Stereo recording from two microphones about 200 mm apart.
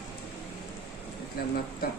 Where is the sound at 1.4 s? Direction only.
50° left (ahead or behind).